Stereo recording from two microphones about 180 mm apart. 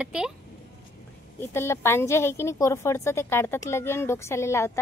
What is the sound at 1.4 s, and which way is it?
A woman's voice, 15° left (ahead or behind).